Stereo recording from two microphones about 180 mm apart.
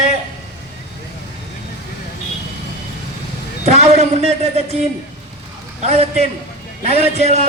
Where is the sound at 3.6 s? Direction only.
35° right (ahead or behind).